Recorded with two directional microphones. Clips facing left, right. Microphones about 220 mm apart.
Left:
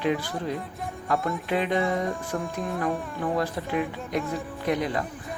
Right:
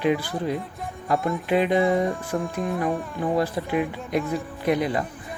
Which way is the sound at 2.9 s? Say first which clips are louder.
Right 3 dB; 10° right (ahead or behind).